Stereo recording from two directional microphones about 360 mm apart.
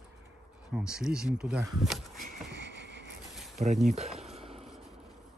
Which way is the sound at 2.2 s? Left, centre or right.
Right.